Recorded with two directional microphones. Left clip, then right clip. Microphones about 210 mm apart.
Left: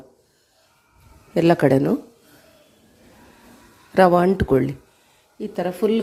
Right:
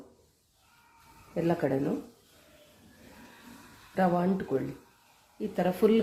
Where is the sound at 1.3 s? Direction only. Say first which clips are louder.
Left 12 dB; 40° left (ahead or behind).